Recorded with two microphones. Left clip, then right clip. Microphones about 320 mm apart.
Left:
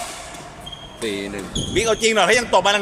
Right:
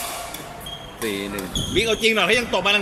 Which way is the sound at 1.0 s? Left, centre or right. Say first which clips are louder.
Left 1 dB; centre.